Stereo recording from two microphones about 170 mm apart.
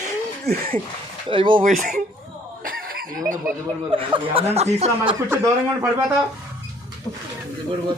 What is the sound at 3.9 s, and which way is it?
Speech, 30° right (ahead or behind).